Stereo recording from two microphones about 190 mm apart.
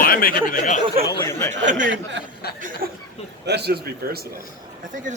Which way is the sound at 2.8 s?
50° right (ahead or behind).